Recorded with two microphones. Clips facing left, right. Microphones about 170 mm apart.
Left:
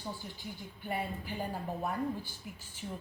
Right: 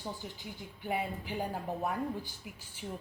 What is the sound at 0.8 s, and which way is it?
Speech, 15° right (ahead or behind).